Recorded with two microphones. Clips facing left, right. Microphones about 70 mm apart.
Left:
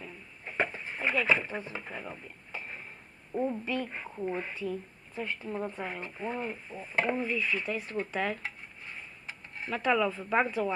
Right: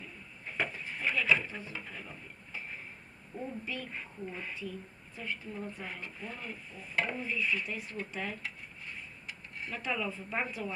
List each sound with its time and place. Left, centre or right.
0.4 s a sound: left
3.3 s a woman's voice: left
3.9 s speech: left
5.2 s speech: left
7.3 s a woman's voice: left
8.4 s stir: left
9.2 s a sound: left
9.7 s speech: left
10.4 s speech: left